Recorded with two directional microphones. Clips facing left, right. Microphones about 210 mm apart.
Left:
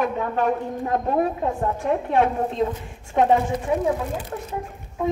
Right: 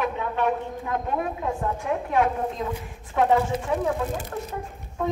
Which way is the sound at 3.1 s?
20° left (ahead or behind).